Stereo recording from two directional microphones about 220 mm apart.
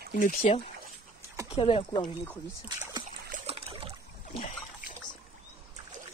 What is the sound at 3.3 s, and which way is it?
Trickle, 30° right (ahead or behind).